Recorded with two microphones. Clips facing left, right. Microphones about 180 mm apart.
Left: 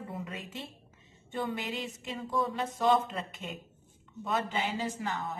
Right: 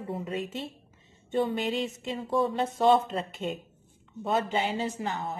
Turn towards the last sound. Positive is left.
turn(degrees=-30)  # may be behind; listen again after turning